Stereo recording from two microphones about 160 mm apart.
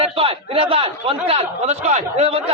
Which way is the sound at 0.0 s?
35° right (ahead or behind).